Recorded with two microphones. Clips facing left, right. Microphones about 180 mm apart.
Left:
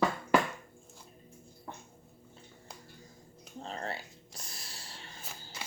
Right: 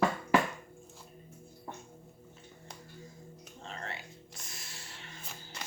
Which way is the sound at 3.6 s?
35° left (ahead or behind).